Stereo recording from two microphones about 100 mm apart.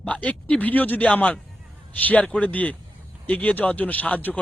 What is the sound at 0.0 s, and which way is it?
A man's voice, 15° left (ahead or behind).